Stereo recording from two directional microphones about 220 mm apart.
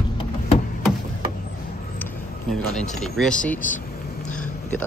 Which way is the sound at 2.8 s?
Centre (ahead or behind).